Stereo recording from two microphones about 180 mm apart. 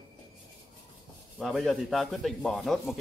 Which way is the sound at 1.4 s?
Centre (ahead or behind).